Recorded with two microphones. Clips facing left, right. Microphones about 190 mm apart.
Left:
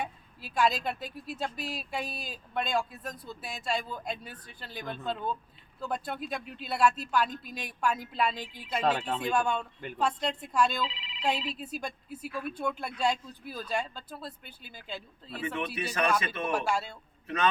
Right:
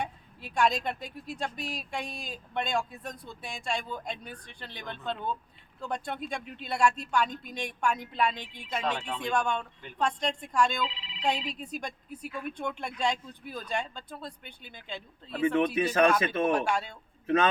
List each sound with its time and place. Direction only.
0.0 s speech: 5° left (ahead or behind)
15.5 s speech: 50° right (ahead or behind)
16.5 s speech: 5° left (ahead or behind)
17.2 s a man's voice: 50° right (ahead or behind)